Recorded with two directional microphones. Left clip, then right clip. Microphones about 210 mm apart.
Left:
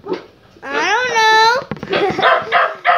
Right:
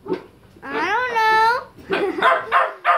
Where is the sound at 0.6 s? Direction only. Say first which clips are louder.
Left 5 dB; 40° right (ahead or behind).